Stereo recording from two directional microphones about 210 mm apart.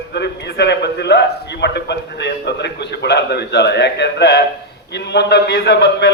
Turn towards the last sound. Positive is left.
turn(degrees=50)  # may be behind; listen again after turning